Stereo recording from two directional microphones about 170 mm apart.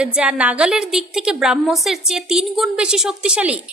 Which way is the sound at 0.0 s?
5° right (ahead or behind).